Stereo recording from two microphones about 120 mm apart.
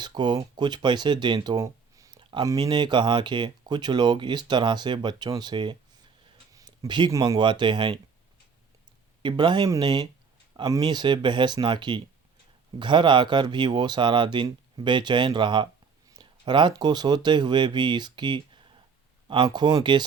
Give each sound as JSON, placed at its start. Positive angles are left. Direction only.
{"t": 0.0, "sound": "speech", "side_deg": -35}
{"t": 1.5, "sound": "a sound", "side_deg": -25}
{"t": 2.5, "sound": "speech", "side_deg": -35}
{"t": 6.5, "sound": "a sound", "side_deg": -35}
{"t": 7.1, "sound": "speech", "side_deg": -35}
{"t": 9.2, "sound": "speech", "side_deg": -40}